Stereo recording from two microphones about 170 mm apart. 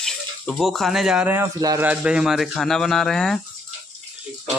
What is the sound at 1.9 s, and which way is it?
Speech, 5° right (ahead or behind).